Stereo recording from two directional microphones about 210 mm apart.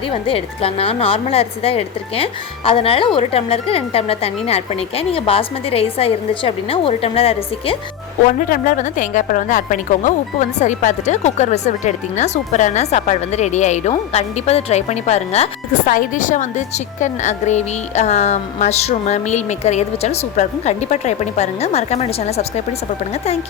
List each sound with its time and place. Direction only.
0.1 s a woman's voice: 25° left (ahead or behind)
8.4 s a woman's voice: 40° left (ahead or behind)